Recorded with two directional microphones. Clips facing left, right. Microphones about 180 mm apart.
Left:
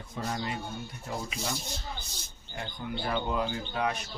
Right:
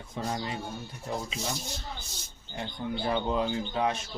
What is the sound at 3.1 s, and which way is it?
Speech, 25° right (ahead or behind).